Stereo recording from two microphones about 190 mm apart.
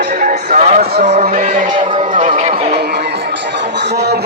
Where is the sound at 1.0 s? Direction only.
40° right (ahead or behind).